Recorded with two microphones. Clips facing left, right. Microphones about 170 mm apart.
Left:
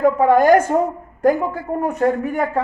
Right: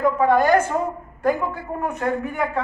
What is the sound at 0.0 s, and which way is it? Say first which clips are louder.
A woman's voice: left 4 dB; 45° left (ahead or behind).